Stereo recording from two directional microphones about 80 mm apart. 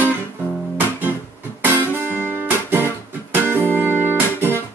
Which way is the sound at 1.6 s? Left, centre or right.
Right.